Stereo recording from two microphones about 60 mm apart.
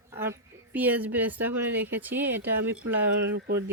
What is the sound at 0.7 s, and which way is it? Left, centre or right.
A woman's voice, right.